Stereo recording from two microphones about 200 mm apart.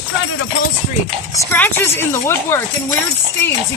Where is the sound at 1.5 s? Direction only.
10° left (ahead or behind).